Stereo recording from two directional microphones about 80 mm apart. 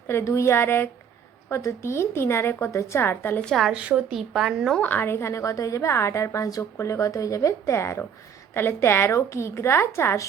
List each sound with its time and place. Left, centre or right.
0.1 s a woman's voice: left
3.4 s a woman's voice: centre
3.7 s speech: centre
4.8 s a woman's voice: left